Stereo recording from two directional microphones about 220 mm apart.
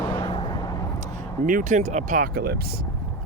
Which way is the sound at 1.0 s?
35° right (ahead or behind).